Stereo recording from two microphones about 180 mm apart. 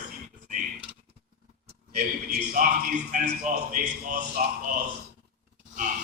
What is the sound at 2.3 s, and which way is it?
A man's voice, 50° right (ahead or behind).